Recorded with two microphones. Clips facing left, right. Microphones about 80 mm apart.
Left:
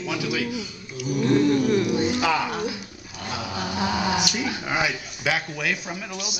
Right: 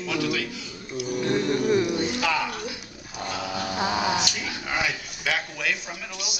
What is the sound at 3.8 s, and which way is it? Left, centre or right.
Speech, centre.